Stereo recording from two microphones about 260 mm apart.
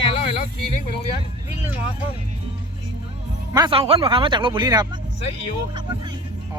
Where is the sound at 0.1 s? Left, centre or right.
Left.